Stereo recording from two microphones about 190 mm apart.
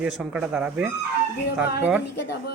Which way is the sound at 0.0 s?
5° right (ahead or behind).